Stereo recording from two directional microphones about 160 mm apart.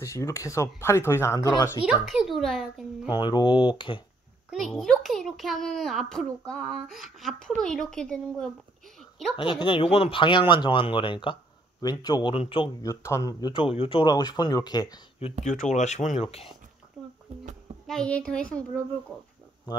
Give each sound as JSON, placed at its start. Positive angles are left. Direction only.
{"t": 0.0, "sound": "speech", "side_deg": 15}
{"t": 2.0, "sound": "a child's voice", "side_deg": 0}
{"t": 3.1, "sound": "speech", "side_deg": 25}
{"t": 4.5, "sound": "a child's voice", "side_deg": 0}
{"t": 9.4, "sound": "speech", "side_deg": 30}
{"t": 12.8, "sound": "speech", "side_deg": 20}
{"t": 13.6, "sound": "speech", "side_deg": 35}
{"t": 15.7, "sound": "speech", "side_deg": 45}
{"t": 17.8, "sound": "a child's voice", "side_deg": 5}